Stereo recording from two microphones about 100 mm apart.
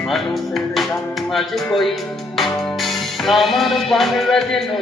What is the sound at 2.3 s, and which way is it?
Music, centre (ahead or behind).